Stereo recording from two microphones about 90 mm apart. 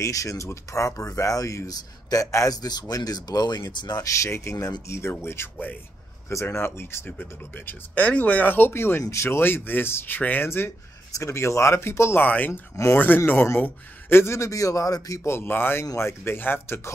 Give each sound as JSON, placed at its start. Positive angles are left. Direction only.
{"t": 0.0, "sound": "a man's voice", "side_deg": 40}